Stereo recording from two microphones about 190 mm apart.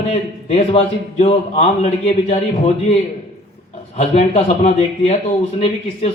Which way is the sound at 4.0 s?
35° left (ahead or behind).